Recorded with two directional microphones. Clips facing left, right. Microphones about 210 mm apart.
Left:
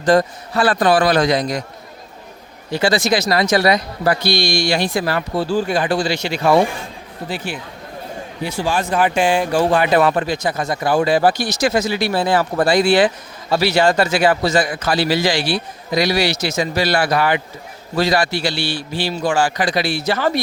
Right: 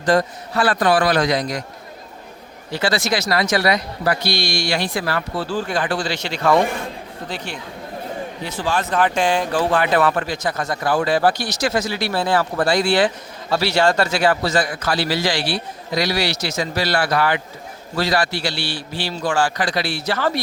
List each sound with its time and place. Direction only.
0.1 s speech: 25° left (ahead or behind)
2.7 s speech: 15° left (ahead or behind)
4.4 s a man's voice: 15° left (ahead or behind)